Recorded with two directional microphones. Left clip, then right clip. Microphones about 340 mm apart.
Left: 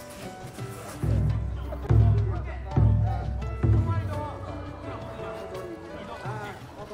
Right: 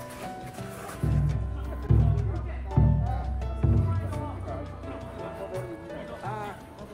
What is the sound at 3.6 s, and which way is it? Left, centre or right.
Music, left.